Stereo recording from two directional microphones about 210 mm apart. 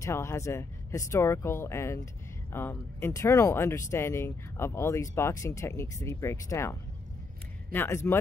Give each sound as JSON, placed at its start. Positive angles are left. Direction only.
{"t": 0.0, "sound": "speech", "side_deg": 15}
{"t": 7.7, "sound": "speech", "side_deg": 10}